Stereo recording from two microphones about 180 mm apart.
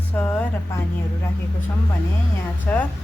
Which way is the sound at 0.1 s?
10° left (ahead or behind).